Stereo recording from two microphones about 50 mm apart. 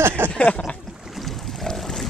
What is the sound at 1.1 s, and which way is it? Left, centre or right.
Boat, centre.